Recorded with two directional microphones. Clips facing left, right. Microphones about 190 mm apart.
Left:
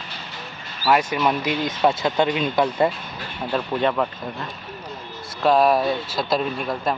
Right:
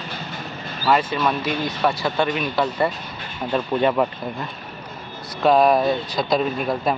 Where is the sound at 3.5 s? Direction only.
10° right (ahead or behind).